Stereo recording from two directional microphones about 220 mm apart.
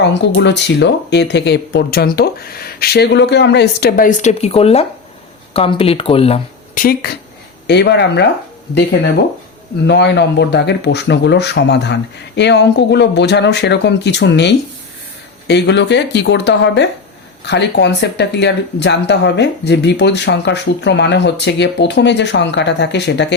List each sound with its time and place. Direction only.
0.0 s speech: 50° left (ahead or behind); by 6.8 s 25° left (ahead or behind)
7.0 s speech: 45° left (ahead or behind)